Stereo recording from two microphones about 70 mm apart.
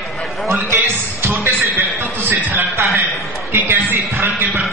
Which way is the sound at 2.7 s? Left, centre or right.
Right.